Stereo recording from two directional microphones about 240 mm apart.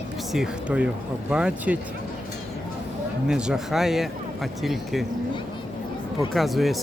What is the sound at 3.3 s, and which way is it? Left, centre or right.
Speech, centre.